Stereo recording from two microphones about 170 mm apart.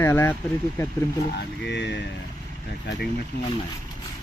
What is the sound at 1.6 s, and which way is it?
Speech, 90° left.